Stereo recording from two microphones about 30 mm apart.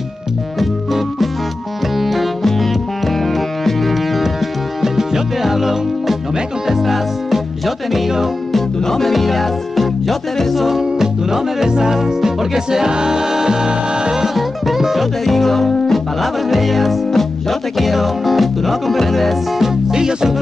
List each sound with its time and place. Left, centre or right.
0.6 s organ: centre
2.0 s music: centre
2.4 s music: centre
8.5 s music: centre; by 14.1 s right
14.1 s music: centre
15.2 s music: centre
17.7 s music: centre
19.6 s music: right